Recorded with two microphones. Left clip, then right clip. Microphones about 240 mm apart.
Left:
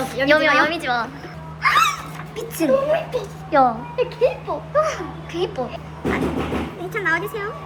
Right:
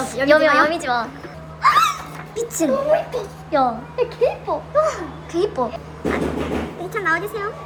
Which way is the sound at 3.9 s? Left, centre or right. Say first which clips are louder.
Right 3 dB; centre.